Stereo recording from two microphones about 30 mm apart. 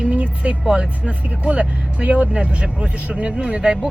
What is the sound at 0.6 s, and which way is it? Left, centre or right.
Speech, right.